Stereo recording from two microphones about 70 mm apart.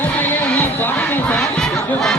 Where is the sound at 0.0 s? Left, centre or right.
Left.